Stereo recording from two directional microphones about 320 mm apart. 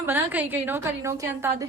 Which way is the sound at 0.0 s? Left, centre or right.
Centre.